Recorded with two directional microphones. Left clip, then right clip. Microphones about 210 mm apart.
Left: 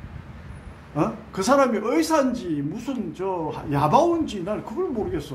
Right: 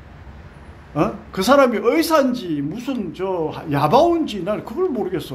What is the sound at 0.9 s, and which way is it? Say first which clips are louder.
A man's voice: right 4 dB; 25° right (ahead or behind).